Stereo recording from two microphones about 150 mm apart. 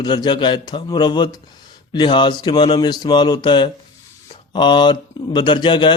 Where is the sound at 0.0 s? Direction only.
30° left (ahead or behind).